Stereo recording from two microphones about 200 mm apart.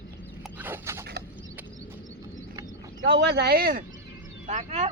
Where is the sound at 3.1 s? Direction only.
60° right (ahead or behind).